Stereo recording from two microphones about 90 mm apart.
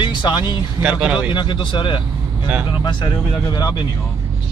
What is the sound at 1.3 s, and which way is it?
Speech, 60° left (ahead or behind).